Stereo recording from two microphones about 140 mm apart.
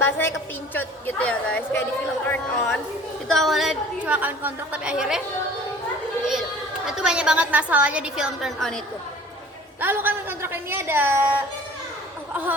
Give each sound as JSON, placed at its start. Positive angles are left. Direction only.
{"t": 0.0, "sound": "a woman's voice", "side_deg": 15}
{"t": 3.2, "sound": "a woman's voice", "side_deg": 0}
{"t": 6.8, "sound": "a woman's voice", "side_deg": -5}
{"t": 9.8, "sound": "a woman's voice", "side_deg": -15}